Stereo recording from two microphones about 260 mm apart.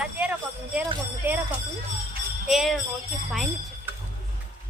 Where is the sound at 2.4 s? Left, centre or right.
Centre.